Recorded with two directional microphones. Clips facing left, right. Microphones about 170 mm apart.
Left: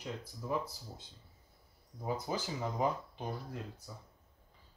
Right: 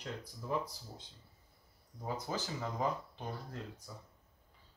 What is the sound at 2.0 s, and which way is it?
Speech, 15° left (ahead or behind).